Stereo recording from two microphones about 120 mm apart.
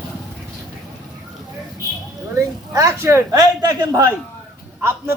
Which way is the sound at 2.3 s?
25° right (ahead or behind).